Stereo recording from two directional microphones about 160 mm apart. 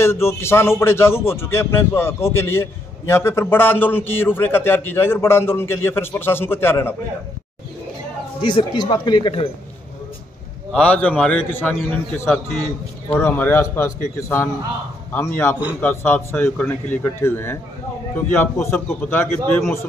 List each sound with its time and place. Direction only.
0.0 s speech: 15° left (ahead or behind)
8.4 s speech: 30° left (ahead or behind)
10.7 s speech: 10° left (ahead or behind)
13.1 s speech: 15° left (ahead or behind)